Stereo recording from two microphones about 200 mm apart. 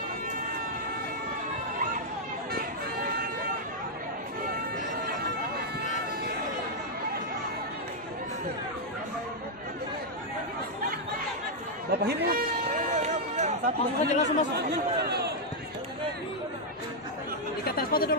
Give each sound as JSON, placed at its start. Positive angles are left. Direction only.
{"t": 2.5, "sound": "run", "side_deg": -50}
{"t": 11.9, "sound": "a sound", "side_deg": -55}
{"t": 14.0, "sound": "speech", "side_deg": 35}
{"t": 14.6, "sound": "speech", "side_deg": -55}
{"t": 17.6, "sound": "chatter", "side_deg": 50}